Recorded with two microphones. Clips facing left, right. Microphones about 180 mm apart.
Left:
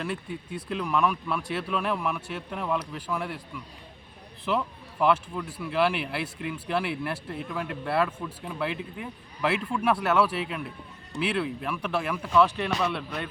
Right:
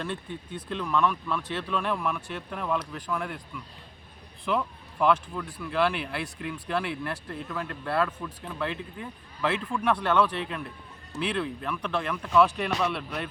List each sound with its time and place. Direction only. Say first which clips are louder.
0.0 s speech: left 1 dB; 5° left (ahead or behind)